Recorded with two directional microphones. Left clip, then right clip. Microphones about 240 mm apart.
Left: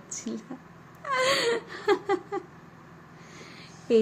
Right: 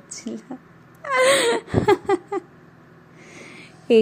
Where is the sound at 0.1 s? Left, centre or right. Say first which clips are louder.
Right 3 dB; centre.